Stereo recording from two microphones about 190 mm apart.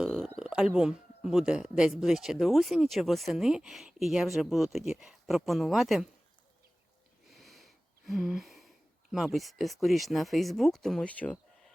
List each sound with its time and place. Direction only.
0.0 s speech: centre (ahead or behind)
7.3 s wheeze: centre (ahead or behind)
9.1 s speech: centre (ahead or behind)